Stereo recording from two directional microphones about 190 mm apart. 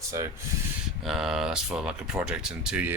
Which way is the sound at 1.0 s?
5° right (ahead or behind).